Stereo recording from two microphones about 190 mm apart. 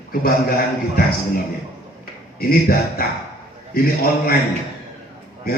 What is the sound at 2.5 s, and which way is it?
Speech, 55° left (ahead or behind).